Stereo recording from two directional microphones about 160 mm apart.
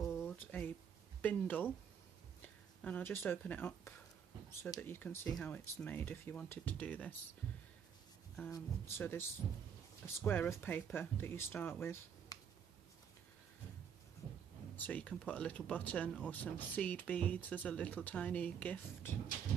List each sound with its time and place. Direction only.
0.1 s a sound: 15° left (ahead or behind)
1.2 s speech: 10° left (ahead or behind)
2.8 s speech: 10° left (ahead or behind)
8.5 s speech: 20° left (ahead or behind)
14.8 s speech: 10° left (ahead or behind)